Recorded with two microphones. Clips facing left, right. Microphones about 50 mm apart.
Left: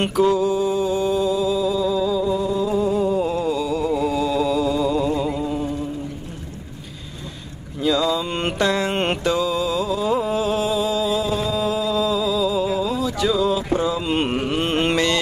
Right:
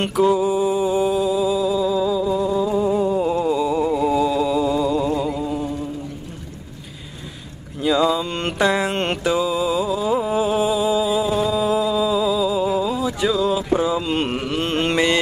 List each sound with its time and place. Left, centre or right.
0.0 s mantra: centre
3.9 s chant: centre
7.8 s a sound: centre
8.2 s mantra: centre
8.5 s mantra: centre
8.9 s music: centre
9.2 s music: centre
13.3 s a sound: centre
14.0 s carnatic music: centre